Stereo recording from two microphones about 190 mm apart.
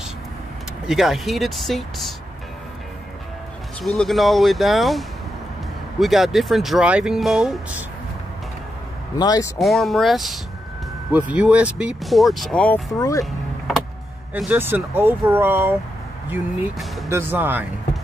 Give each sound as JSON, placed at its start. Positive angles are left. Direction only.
{"t": 0.8, "sound": "speech", "side_deg": 0}
{"t": 3.8, "sound": "speech", "side_deg": 0}
{"t": 9.1, "sound": "speech", "side_deg": 20}
{"t": 9.6, "sound": "speech", "side_deg": 0}
{"t": 13.2, "sound": "vehicle", "side_deg": 0}
{"t": 14.3, "sound": "speech", "side_deg": -10}
{"t": 16.3, "sound": "speech", "side_deg": 0}
{"t": 17.1, "sound": "speech", "side_deg": -10}